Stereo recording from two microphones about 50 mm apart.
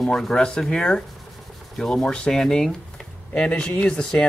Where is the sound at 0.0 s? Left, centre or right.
Centre.